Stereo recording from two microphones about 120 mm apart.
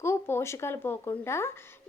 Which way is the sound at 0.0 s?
20° left (ahead or behind).